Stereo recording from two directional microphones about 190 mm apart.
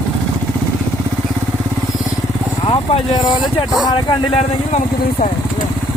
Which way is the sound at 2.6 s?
30° left (ahead or behind).